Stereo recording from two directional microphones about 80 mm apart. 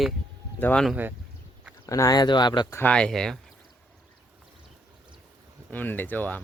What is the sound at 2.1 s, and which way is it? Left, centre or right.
Speech, left.